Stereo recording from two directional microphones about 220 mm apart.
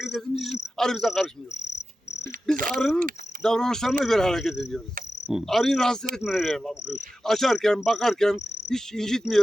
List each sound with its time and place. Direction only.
0.0 s speech: centre (ahead or behind)
1.7 s cricket: 50° left (ahead or behind)
2.6 s speech: 40° right (ahead or behind)
2.8 s speech: 5° left (ahead or behind)